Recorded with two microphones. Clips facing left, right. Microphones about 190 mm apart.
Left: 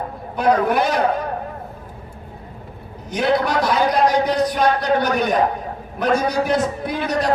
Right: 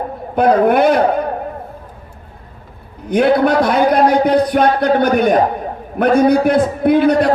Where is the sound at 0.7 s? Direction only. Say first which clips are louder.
Right 7 dB; 55° right (ahead or behind).